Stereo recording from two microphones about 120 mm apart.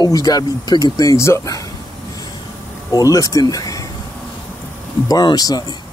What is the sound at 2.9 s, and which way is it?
Speech, 30° left (ahead or behind).